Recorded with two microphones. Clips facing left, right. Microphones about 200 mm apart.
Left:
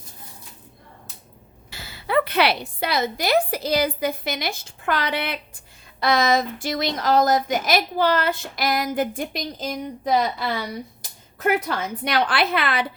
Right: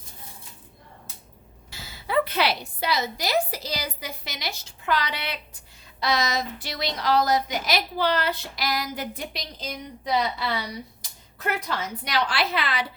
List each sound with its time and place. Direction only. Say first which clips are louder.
1.7 s a woman's voice: left 3 dB; 65° left (ahead or behind)